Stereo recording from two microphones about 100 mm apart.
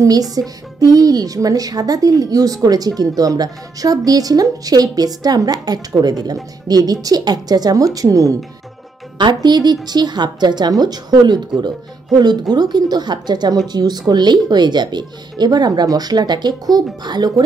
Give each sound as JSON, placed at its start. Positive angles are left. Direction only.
{"t": 0.0, "sound": "speech", "side_deg": -35}
{"t": 9.2, "sound": "speech", "side_deg": -45}